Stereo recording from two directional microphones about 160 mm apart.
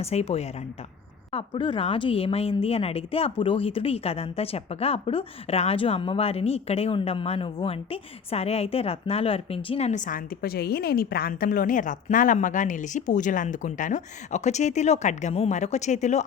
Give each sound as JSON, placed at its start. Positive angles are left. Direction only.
{"t": 0.0, "sound": "a woman's voice", "side_deg": 40}